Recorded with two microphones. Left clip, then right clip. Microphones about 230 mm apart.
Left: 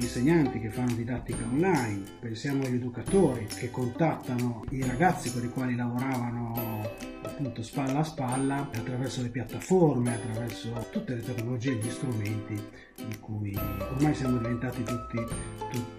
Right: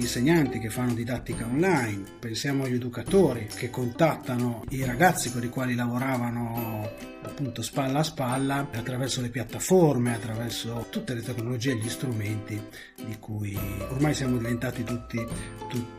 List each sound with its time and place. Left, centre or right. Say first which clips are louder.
0.0 s speech: right 2 dB; centre
7.7 s speech: right 4 dB; centre
9.7 s speech: right 3 dB; centre
10.0 s speech: right 2 dB; centre
13.6 s speech: right 1 dB; centre